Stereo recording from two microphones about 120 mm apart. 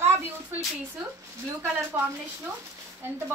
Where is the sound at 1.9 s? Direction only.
15° right (ahead or behind).